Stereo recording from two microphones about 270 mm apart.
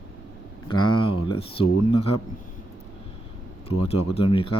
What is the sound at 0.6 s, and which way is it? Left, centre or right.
Speech, centre.